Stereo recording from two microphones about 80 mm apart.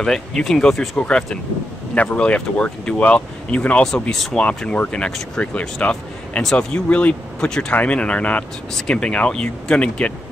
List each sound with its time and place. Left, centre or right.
0.0 s speech: centre